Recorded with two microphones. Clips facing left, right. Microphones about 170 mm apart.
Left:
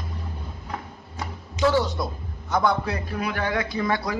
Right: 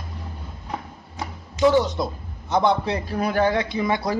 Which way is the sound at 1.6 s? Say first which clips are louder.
Right 4 dB; 20° right (ahead or behind).